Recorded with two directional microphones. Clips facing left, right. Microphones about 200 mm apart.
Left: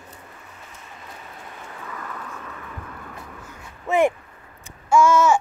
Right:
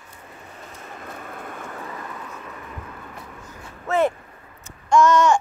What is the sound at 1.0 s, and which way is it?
Vehicle, 55° right (ahead or behind).